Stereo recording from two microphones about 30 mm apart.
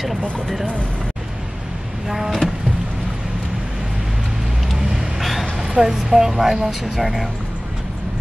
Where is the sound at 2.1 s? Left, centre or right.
Centre.